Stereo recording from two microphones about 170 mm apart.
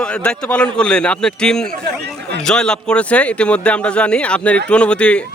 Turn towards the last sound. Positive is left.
turn(degrees=5)  # may be behind; listen again after turning